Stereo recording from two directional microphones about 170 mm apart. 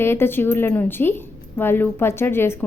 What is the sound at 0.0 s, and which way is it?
Speech, 15° left (ahead or behind).